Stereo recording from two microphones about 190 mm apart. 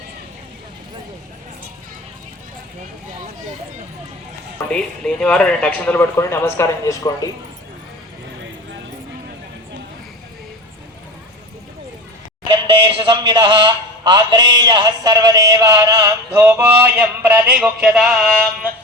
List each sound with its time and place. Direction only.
4.7 s speech: 5° left (ahead or behind)
12.7 s speech: 25° right (ahead or behind); by 18.2 s centre (ahead or behind)